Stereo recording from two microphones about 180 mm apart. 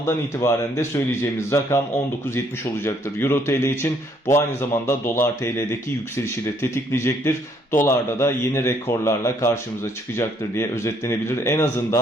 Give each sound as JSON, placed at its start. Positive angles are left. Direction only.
{"t": 0.0, "sound": "speech", "side_deg": 15}
{"t": 2.8, "sound": "speech", "side_deg": 15}